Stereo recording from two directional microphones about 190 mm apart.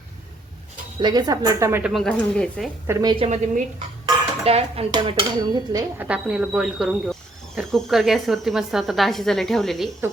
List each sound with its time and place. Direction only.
0.9 s dishes: 20° right (ahead or behind)
1.8 s speech: centre (ahead or behind)
2.8 s dishes: 15° right (ahead or behind)
3.2 s speech: 40° right (ahead or behind)
4.4 s dishes: 30° right (ahead or behind)
6.0 s speech: 5° right (ahead or behind)